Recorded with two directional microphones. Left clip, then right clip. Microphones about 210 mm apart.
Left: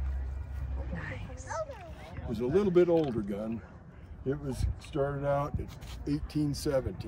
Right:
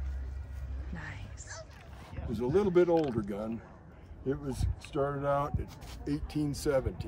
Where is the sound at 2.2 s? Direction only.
15° right (ahead or behind).